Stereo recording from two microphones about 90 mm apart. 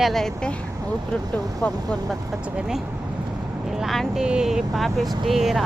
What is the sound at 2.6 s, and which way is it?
Speech, 5° right (ahead or behind).